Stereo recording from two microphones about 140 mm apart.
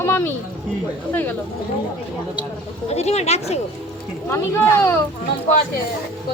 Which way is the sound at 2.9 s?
50° left (ahead or behind).